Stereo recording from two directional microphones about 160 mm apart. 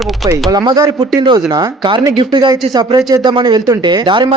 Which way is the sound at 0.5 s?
25° right (ahead or behind).